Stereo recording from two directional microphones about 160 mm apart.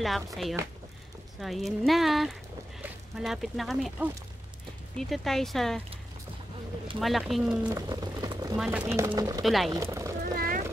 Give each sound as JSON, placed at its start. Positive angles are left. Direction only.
{"t": 1.4, "sound": "speech", "side_deg": 0}
{"t": 7.0, "sound": "speech", "side_deg": 0}
{"t": 7.7, "sound": "a sound", "side_deg": -25}
{"t": 8.5, "sound": "speech", "side_deg": -10}
{"t": 9.4, "sound": "speech", "side_deg": 0}
{"t": 9.7, "sound": "speech", "side_deg": -20}
{"t": 10.2, "sound": "vehicle", "side_deg": -65}